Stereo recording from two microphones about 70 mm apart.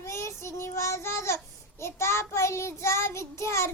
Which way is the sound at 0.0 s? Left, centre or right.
Left.